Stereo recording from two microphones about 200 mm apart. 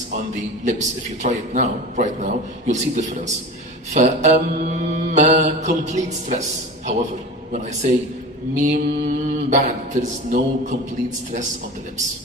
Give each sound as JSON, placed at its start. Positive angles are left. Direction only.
{"t": 0.7, "sound": "mantra", "side_deg": -35}
{"t": 7.5, "sound": "mantra", "side_deg": -35}